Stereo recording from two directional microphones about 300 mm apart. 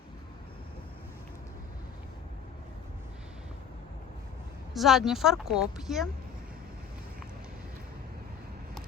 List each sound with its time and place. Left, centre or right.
4.7 s speech: centre